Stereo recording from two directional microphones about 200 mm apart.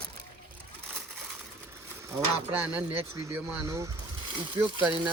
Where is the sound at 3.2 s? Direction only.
15° right (ahead or behind).